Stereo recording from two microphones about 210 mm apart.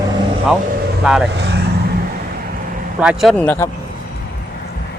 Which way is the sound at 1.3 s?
50° right (ahead or behind).